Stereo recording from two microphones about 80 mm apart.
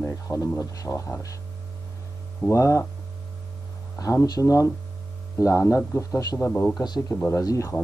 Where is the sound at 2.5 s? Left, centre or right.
Left.